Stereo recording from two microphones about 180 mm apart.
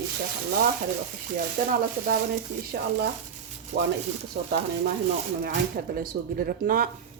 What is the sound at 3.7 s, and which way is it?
Stir, 70° right (ahead or behind).